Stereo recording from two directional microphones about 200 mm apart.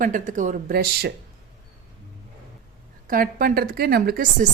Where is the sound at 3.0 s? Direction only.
45° right (ahead or behind).